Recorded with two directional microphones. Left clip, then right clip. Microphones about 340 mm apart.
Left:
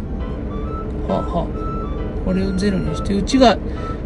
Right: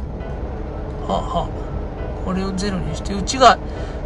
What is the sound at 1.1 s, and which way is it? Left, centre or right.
Speech, right.